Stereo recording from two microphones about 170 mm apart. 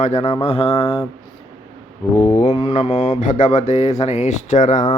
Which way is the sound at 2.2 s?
40° left (ahead or behind).